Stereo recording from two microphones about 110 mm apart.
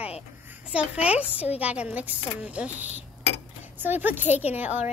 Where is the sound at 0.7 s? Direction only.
10° right (ahead or behind).